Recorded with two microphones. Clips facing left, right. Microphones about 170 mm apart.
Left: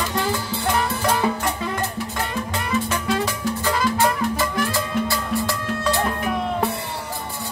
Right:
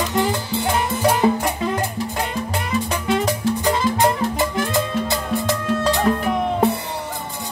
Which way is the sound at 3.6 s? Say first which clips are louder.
Right 2 dB; 20° right (ahead or behind).